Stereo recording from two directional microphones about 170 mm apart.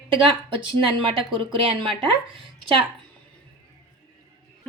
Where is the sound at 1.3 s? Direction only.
30° right (ahead or behind).